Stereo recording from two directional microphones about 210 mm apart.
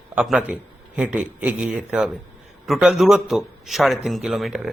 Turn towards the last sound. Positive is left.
turn(degrees=0)  # may be behind; listen again after turning